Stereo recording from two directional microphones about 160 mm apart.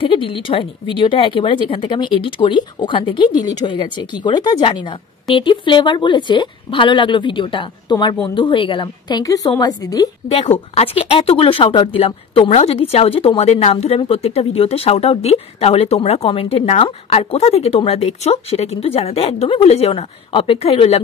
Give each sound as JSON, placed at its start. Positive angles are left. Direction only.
{"t": 0.0, "sound": "a woman's voice", "side_deg": 35}
{"t": 10.2, "sound": "a woman's voice", "side_deg": 40}